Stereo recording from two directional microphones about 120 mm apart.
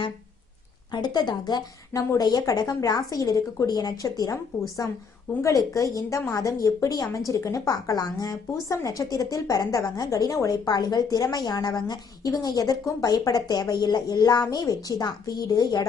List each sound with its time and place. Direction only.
0.9 s a woman's voice: 35° left (ahead or behind)